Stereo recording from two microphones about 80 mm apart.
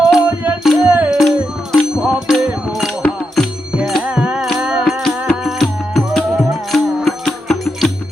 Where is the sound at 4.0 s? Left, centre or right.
Centre.